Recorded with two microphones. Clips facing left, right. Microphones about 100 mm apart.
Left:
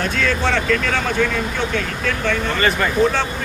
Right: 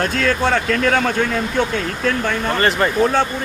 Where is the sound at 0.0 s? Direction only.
45° right (ahead or behind).